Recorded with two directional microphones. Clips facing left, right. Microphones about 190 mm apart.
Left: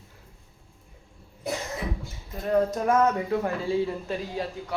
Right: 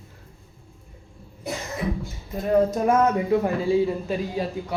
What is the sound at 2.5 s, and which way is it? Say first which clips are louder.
A woman's voice: right 3 dB; 10° right (ahead or behind).